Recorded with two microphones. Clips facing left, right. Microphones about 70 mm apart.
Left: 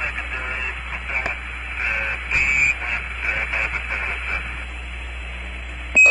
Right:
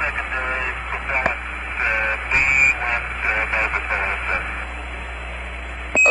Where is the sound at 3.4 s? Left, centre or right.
Right.